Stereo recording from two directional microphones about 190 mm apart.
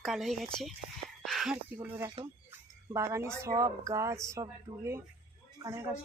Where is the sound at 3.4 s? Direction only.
15° right (ahead or behind).